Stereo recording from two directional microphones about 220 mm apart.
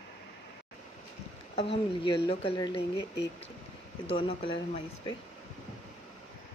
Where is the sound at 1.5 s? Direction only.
25° left (ahead or behind).